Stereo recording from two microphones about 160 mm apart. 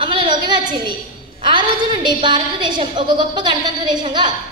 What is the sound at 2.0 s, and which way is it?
A woman's voice, 30° right (ahead or behind).